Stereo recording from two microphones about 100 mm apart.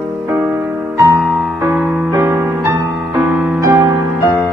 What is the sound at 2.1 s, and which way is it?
Music, 25° right (ahead or behind).